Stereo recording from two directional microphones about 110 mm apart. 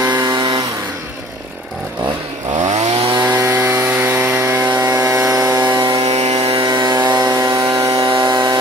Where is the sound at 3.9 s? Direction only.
20° right (ahead or behind).